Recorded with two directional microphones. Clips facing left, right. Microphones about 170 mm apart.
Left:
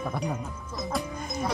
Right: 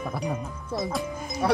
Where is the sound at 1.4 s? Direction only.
70° right (ahead or behind).